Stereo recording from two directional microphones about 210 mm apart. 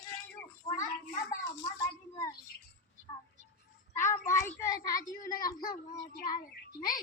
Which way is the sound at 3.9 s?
15° left (ahead or behind).